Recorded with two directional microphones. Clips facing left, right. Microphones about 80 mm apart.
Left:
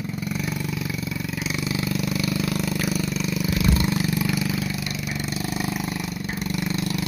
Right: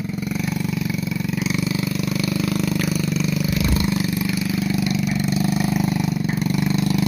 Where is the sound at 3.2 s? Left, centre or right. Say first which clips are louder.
Right 4 dB; centre.